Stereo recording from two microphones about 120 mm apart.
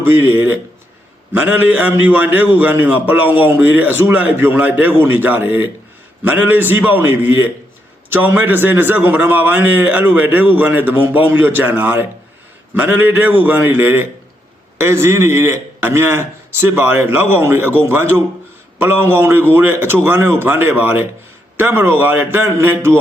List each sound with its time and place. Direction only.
0.0 s a man's voice: 15° right (ahead or behind)